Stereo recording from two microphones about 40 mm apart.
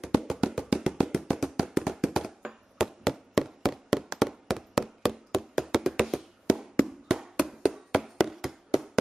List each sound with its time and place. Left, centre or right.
0.0 s music: centre
0.7 s tap: centre
2.1 s a sound: centre